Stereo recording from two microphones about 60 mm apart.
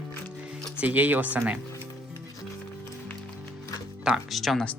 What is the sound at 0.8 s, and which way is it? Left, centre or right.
Speech, right.